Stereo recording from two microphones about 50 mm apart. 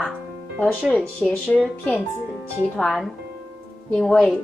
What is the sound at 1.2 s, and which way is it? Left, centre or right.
Speech, left.